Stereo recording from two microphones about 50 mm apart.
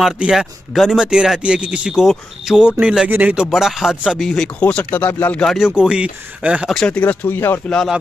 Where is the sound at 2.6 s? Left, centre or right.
Right.